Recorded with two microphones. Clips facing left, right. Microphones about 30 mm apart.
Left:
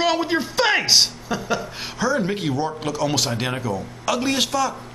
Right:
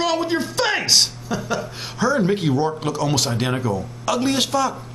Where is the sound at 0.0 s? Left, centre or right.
Centre.